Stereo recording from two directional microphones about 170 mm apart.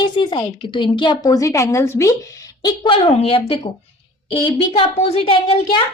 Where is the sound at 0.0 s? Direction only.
25° left (ahead or behind).